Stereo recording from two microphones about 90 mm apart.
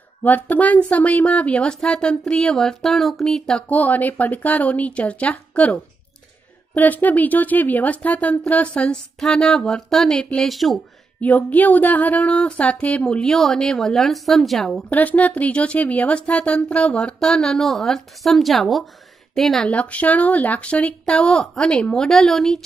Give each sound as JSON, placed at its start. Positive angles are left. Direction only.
{"t": 0.2, "sound": "speech", "side_deg": 20}
{"t": 3.6, "sound": "speech", "side_deg": 20}
{"t": 11.1, "sound": "speech", "side_deg": 20}
{"t": 14.9, "sound": "speech", "side_deg": 15}
{"t": 19.7, "sound": "speech", "side_deg": 15}